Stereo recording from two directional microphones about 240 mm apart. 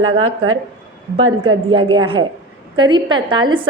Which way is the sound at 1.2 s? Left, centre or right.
Right.